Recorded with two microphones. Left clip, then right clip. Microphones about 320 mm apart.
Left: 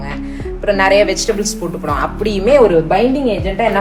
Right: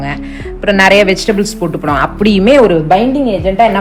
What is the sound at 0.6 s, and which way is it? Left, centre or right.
A woman's voice, right.